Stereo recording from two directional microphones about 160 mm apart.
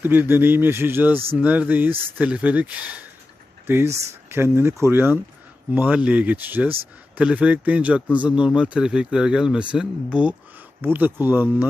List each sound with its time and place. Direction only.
0.0 s speech: 15° right (ahead or behind)
4.3 s speech: 15° right (ahead or behind)